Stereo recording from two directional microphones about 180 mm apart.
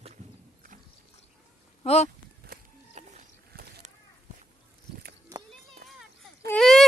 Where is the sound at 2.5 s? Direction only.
50° right (ahead or behind).